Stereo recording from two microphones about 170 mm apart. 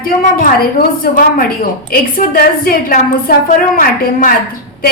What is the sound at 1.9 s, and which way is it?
A woman's voice, 60° left (ahead or behind).